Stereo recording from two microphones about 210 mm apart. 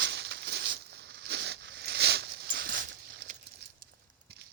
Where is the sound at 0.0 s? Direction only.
55° right (ahead or behind).